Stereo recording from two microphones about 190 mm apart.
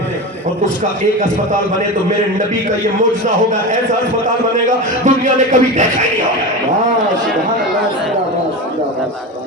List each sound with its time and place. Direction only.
5.0 s a man's voice: 40° right (ahead or behind)